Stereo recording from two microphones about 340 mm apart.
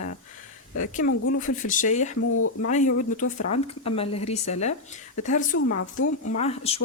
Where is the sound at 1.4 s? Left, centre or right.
Left.